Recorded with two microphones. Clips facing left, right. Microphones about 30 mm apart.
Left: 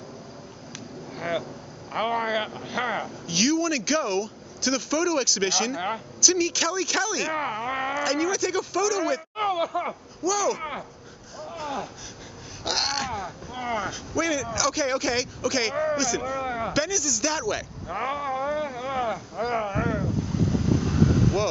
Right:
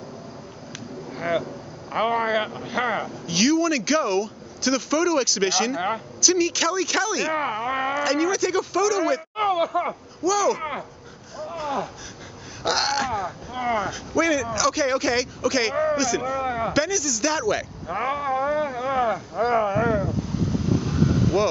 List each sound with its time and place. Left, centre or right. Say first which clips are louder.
1.1 s speech: right 4 dB; centre
11.3 s a sound: right 4 dB; centre
12.6 s speech: right 4 dB; centre
20.8 s vehicle: even; centre